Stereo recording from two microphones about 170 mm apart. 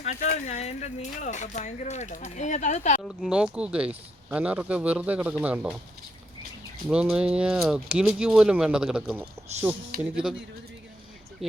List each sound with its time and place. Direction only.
0.0 s speech: 45° left (ahead or behind)
3.0 s speech: centre (ahead or behind)
6.8 s speech: 5° right (ahead or behind)